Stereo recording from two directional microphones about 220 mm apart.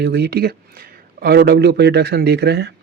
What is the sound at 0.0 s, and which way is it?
Speech, 45° right (ahead or behind).